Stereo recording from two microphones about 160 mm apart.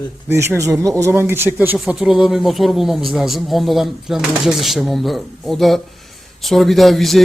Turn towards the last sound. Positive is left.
turn(degrees=0)  # may be behind; listen again after turning